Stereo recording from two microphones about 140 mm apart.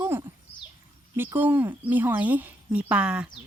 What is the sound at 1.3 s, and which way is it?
Speech, 15° right (ahead or behind).